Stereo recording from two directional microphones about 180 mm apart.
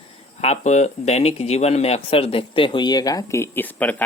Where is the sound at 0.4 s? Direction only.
40° left (ahead or behind).